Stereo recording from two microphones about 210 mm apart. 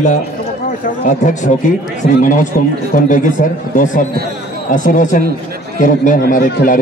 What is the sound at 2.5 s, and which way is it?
A man's voice, 40° left (ahead or behind).